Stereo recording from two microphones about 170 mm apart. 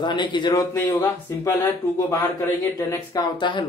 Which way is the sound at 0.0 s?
25° left (ahead or behind).